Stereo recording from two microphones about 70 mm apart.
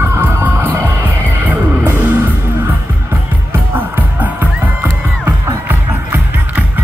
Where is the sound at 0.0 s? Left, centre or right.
Right.